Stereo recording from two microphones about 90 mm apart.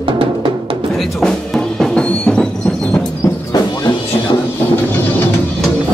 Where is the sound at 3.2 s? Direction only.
45° left (ahead or behind).